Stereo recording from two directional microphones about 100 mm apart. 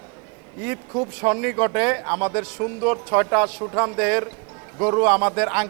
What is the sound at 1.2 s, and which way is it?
Speech, 20° right (ahead or behind).